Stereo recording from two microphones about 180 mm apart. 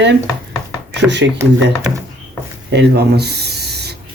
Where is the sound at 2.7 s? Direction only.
65° right (ahead or behind).